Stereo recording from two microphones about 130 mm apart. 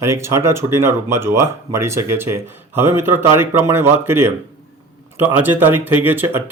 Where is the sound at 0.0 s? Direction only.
20° right (ahead or behind).